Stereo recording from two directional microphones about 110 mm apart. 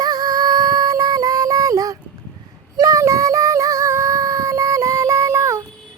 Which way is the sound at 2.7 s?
30° right (ahead or behind).